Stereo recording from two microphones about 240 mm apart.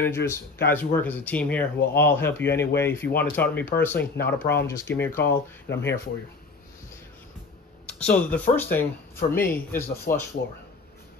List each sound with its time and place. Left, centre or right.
0.0 s speech: centre
5.7 s speech: left
7.8 s speech: centre